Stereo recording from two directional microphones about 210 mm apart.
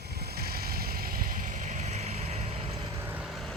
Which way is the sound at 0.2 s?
50° right (ahead or behind).